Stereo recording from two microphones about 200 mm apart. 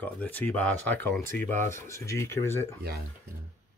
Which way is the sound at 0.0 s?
10° left (ahead or behind).